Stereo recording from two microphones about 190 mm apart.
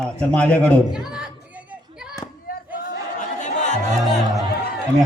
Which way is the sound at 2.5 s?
50° left (ahead or behind).